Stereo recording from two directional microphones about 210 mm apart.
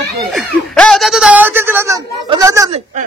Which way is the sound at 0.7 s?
5° left (ahead or behind).